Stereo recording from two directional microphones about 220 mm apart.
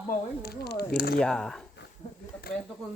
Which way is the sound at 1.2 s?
5° left (ahead or behind).